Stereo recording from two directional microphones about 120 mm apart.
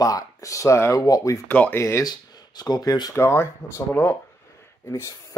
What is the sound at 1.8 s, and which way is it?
Speech, 25° left (ahead or behind).